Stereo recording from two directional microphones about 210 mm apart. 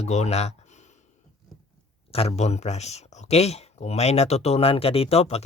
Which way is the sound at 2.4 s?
30° left (ahead or behind).